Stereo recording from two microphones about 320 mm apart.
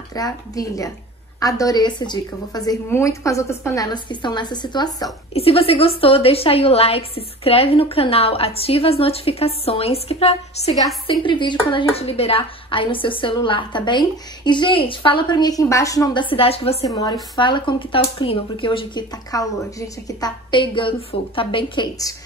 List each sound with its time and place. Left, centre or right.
0.1 s speech: centre